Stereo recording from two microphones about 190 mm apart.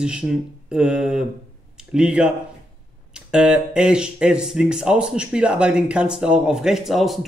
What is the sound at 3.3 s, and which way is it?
Speech, 5° right (ahead or behind).